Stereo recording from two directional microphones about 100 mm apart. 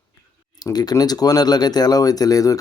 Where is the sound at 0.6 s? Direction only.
40° left (ahead or behind).